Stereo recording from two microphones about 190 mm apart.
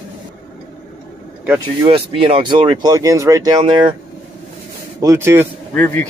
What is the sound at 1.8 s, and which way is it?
Speech, 30° right (ahead or behind).